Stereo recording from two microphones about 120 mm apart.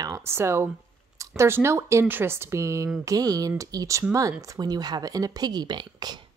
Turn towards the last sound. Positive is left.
turn(degrees=-35)  # may be behind; listen again after turning